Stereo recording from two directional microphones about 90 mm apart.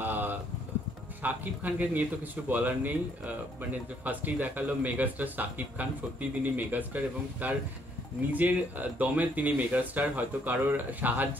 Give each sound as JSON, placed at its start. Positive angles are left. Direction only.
{"t": 0.0, "sound": "a sound", "side_deg": -20}
{"t": 1.2, "sound": "a man's voice", "side_deg": -20}
{"t": 4.0, "sound": "a man's voice", "side_deg": -20}